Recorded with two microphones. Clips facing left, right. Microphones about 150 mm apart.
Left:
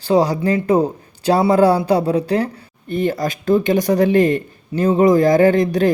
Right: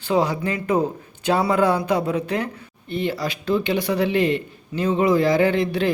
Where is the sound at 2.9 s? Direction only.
45° left (ahead or behind).